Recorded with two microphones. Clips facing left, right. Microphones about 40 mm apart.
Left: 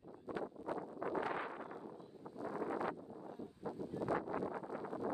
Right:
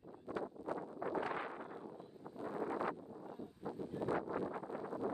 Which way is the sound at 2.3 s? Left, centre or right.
Right.